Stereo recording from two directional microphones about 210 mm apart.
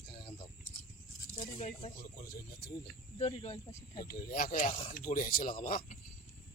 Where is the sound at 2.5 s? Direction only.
45° left (ahead or behind).